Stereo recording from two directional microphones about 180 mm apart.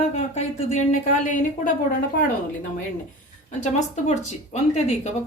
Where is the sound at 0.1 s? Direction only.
40° left (ahead or behind).